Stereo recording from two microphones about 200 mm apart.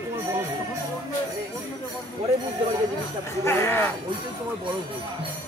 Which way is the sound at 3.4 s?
10° left (ahead or behind).